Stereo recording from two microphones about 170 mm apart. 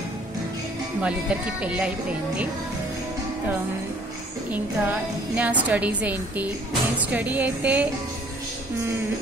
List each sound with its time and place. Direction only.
1.0 s a woman's voice: 5° right (ahead or behind)
4.5 s a woman's voice: 10° right (ahead or behind)